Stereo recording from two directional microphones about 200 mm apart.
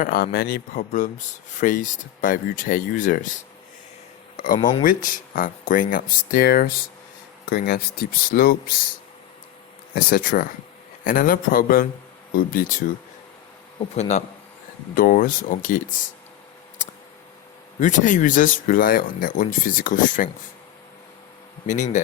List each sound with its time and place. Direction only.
0.0 s speech: 50° left (ahead or behind)
4.4 s a sound: 40° left (ahead or behind)
4.8 s speech: 45° left (ahead or behind)
9.9 s speech: 45° left (ahead or behind)
13.7 s speech: 35° left (ahead or behind)
16.8 s a sound: 35° left (ahead or behind)
17.7 s speech: 40° left (ahead or behind)
21.7 s speech: 40° left (ahead or behind)